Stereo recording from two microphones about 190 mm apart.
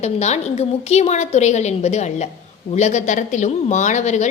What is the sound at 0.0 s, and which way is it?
Speech, 35° left (ahead or behind).